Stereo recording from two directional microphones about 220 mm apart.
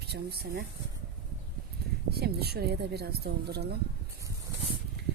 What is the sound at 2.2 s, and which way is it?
A woman's voice, 45° right (ahead or behind).